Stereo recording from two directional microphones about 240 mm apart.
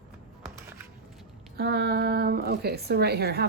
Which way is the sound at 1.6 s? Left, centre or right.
Right.